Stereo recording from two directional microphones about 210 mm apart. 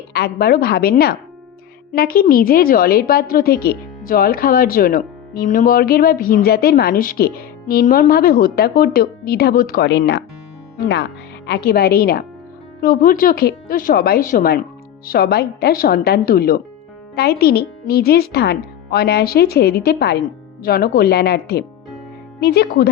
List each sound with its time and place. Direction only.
0.1 s a woman's voice: 50° left (ahead or behind)
11.4 s a woman's voice: 50° left (ahead or behind)